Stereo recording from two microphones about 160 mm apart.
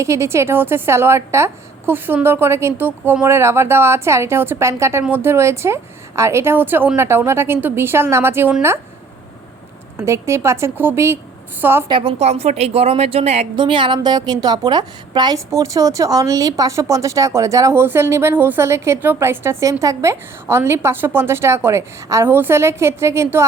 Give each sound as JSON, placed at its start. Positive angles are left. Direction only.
{"t": 0.0, "sound": "a woman's voice", "side_deg": -15}
{"t": 10.0, "sound": "a woman's voice", "side_deg": -15}
{"t": 11.9, "sound": "a woman's voice", "side_deg": -35}